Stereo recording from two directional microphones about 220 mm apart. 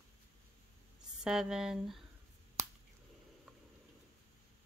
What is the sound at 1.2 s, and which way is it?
Speech, centre (ahead or behind).